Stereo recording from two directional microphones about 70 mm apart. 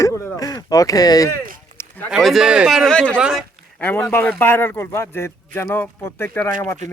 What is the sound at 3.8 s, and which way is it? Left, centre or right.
Speech, left.